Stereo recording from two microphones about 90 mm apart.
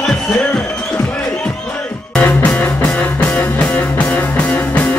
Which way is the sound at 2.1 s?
15° left (ahead or behind).